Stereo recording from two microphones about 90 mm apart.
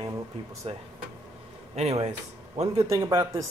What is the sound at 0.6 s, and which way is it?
Speech, 90° right.